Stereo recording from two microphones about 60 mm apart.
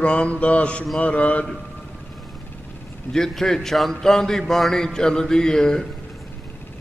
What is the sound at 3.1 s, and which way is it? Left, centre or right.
A man's voice, centre.